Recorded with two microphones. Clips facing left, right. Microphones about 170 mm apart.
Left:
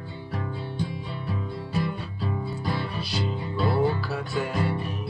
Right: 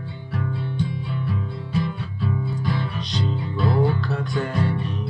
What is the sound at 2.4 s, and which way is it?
Music, 5° left (ahead or behind).